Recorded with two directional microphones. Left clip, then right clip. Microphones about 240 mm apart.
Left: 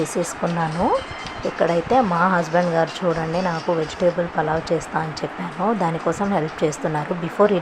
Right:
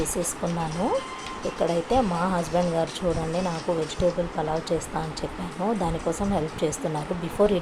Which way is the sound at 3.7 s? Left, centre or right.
Centre.